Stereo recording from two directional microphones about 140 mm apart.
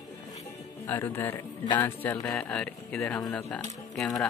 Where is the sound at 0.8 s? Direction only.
15° left (ahead or behind).